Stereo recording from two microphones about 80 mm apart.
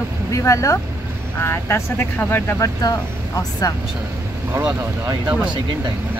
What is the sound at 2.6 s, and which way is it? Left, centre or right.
Speech, left.